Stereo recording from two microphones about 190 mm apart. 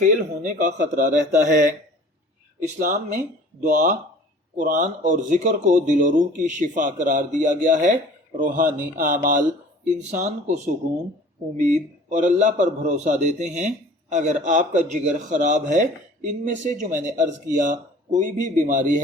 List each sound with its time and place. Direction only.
0.0 s a man's voice: 45° right (ahead or behind)